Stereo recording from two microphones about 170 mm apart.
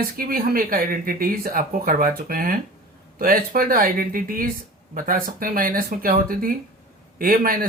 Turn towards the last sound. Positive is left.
turn(degrees=-55)  # may be behind; listen again after turning